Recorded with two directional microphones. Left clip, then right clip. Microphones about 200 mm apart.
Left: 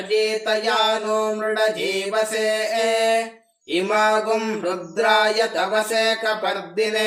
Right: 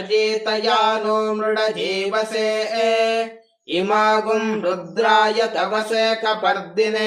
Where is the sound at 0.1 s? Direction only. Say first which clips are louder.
Right 1 dB; 20° right (ahead or behind).